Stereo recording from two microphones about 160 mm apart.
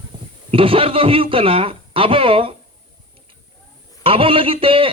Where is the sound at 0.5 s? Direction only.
35° right (ahead or behind).